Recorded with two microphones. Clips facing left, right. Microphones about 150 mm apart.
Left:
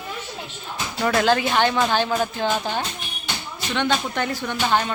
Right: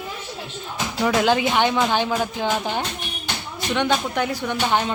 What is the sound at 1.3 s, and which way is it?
Speech, 15° right (ahead or behind).